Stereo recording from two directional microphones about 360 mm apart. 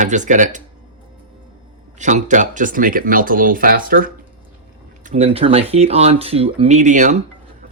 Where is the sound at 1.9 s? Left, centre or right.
Centre.